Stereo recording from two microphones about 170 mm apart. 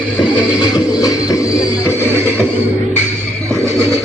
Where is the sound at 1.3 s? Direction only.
20° left (ahead or behind).